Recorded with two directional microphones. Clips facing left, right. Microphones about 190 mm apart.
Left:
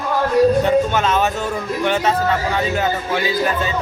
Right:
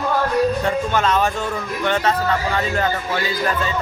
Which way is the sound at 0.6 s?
5° left (ahead or behind).